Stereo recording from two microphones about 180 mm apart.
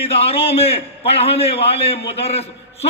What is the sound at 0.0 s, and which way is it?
A man's voice, 30° left (ahead or behind).